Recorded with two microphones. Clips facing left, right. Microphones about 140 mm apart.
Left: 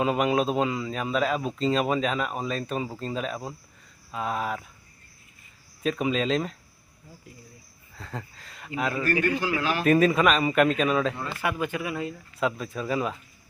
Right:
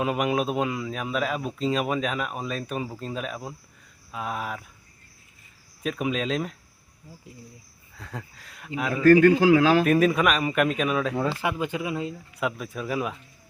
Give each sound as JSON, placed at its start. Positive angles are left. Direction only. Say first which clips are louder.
{"t": 0.0, "sound": "speech", "louder": "left 1 dB", "side_deg": -5}
{"t": 5.8, "sound": "speech", "louder": "left 2 dB", "side_deg": -5}
{"t": 7.9, "sound": "speech", "louder": "left 1 dB", "side_deg": 0}
{"t": 11.3, "sound": "speech", "louder": "right 1 dB", "side_deg": -30}
{"t": 12.4, "sound": "speech", "louder": "left 2 dB", "side_deg": -5}